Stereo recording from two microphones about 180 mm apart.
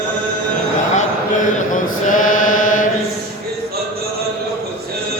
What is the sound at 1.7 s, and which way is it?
Chant, 45° left (ahead or behind).